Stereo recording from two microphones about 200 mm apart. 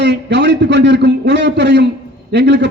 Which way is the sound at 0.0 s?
60° right (ahead or behind).